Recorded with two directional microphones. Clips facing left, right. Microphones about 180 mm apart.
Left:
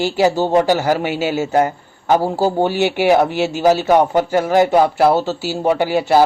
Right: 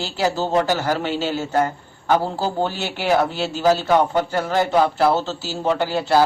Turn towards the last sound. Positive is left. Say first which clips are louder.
# left 4 dB
turn(degrees=15)  # may be behind; listen again after turning